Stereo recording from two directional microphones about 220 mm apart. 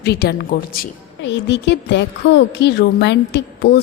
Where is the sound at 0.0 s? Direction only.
50° left (ahead or behind).